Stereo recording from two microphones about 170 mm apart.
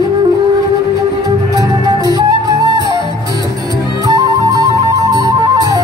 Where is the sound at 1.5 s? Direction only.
20° right (ahead or behind).